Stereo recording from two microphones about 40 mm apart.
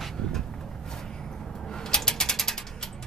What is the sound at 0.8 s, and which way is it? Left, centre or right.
Vehicle, centre.